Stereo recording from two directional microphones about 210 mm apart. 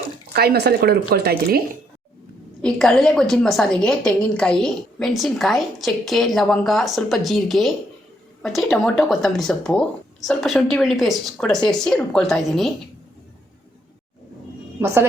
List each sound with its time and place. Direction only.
0.3 s speech: 50° right (ahead or behind)
2.6 s a woman's voice: 5° left (ahead or behind)